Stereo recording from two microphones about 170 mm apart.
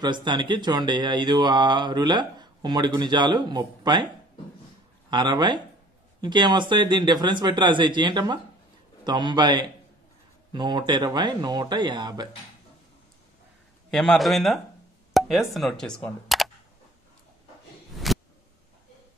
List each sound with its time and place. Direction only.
0.0 s speech: 25° right (ahead or behind)
5.1 s speech: 25° right (ahead or behind)
13.8 s a man's voice: centre (ahead or behind)
17.9 s a sound: centre (ahead or behind)